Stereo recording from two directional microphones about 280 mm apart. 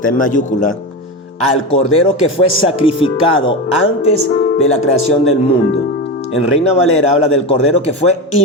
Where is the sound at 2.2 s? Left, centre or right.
Left.